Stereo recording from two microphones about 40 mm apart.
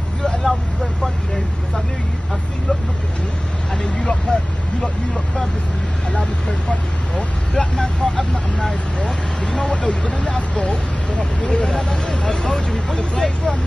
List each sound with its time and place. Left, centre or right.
0.2 s vehicle: centre
3.7 s vehicle: centre
7.2 s speech: centre
9.7 s speech: left